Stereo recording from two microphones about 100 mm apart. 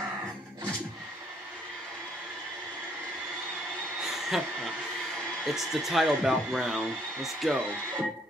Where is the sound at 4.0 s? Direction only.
5° right (ahead or behind).